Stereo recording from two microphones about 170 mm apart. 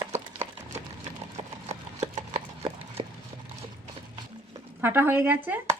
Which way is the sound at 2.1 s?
40° right (ahead or behind).